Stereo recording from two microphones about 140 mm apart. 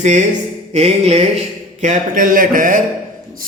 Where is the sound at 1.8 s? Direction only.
65° right (ahead or behind).